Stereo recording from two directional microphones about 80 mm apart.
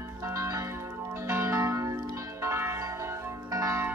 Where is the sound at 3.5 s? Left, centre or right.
Right.